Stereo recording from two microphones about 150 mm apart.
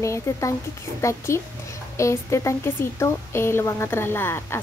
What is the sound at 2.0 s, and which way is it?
A woman's voice, 20° left (ahead or behind).